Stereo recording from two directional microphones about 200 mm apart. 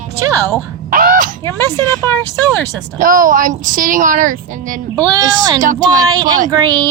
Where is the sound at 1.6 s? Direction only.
15° right (ahead or behind).